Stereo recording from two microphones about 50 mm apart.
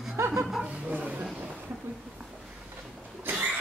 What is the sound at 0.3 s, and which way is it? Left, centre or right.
Speech, centre.